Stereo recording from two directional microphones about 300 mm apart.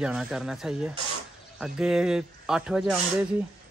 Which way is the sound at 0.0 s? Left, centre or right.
Centre.